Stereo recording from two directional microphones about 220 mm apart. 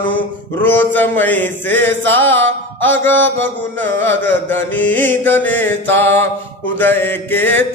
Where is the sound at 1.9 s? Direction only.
55° right (ahead or behind).